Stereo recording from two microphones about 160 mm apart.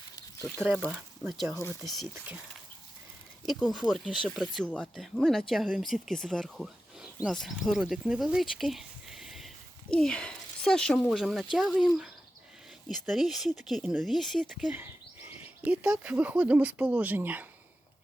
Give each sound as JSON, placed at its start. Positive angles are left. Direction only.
{"t": 1.5, "sound": "speech", "side_deg": 15}
{"t": 3.4, "sound": "speech", "side_deg": 0}